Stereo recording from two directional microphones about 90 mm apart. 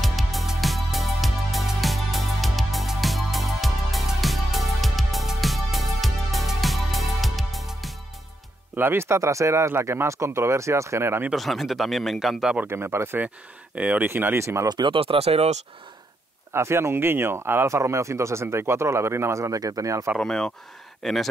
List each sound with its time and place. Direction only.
0.0 s music: centre (ahead or behind)
8.7 s speech: 25° right (ahead or behind)
11.3 s speech: centre (ahead or behind)
12.6 s speech: 30° right (ahead or behind)
13.7 s speech: 15° right (ahead or behind)
14.0 s speech: 25° right (ahead or behind)
14.7 s speech: 55° right (ahead or behind)
15.0 s speech: 90° right
16.5 s speech: 30° right (ahead or behind)
20.2 s speech: 5° left (ahead or behind)